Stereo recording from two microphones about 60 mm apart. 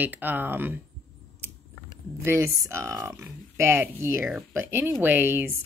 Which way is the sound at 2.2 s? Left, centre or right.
Right.